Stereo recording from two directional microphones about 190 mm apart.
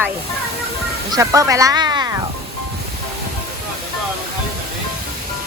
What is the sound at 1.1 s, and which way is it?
Speech, 15° right (ahead or behind).